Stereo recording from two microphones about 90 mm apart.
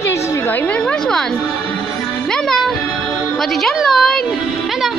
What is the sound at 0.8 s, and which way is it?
Speech, 5° left (ahead or behind).